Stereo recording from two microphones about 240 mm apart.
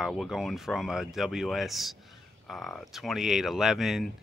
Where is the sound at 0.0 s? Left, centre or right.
Centre.